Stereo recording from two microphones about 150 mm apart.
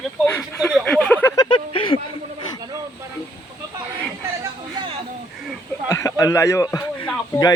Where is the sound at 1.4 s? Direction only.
30° left (ahead or behind).